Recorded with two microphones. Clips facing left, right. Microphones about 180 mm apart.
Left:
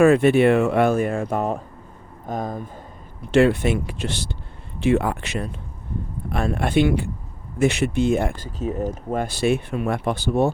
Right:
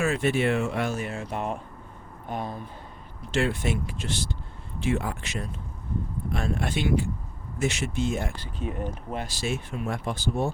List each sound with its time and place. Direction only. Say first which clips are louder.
0.0 s speech: left 10 dB; 60° left (ahead or behind); by 2.6 s 45° left (ahead or behind)
3.3 s speech: left 9 dB; 60° left (ahead or behind)
8.5 s speech: left 5 dB; 40° left (ahead or behind); by 10.5 s 65° left (ahead or behind)